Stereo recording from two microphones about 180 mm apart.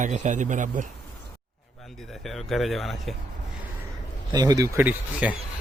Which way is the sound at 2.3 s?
Centre (ahead or behind).